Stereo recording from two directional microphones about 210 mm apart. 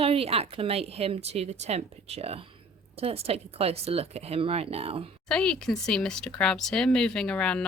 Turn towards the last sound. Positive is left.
turn(degrees=5)  # may be behind; listen again after turning